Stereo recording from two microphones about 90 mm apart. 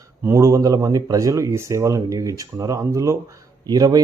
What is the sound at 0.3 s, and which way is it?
Speech, 35° right (ahead or behind).